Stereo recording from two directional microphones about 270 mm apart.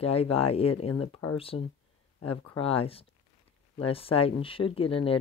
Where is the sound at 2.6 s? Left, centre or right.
Left.